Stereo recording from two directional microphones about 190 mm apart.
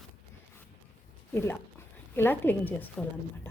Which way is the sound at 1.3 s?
10° left (ahead or behind).